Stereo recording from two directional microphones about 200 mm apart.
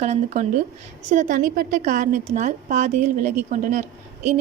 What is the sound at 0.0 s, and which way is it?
A woman's voice, 35° right (ahead or behind).